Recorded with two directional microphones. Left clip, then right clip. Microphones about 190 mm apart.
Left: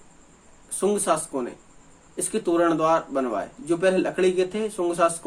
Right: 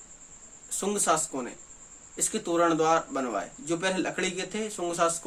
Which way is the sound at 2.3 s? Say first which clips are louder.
Left 4 dB; 5° right (ahead or behind).